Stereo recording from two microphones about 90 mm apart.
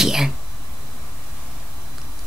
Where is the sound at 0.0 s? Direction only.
5° right (ahead or behind).